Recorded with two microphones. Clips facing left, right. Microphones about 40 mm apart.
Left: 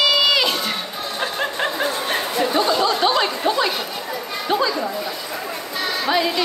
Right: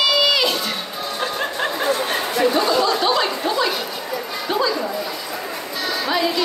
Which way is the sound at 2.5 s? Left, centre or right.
Left.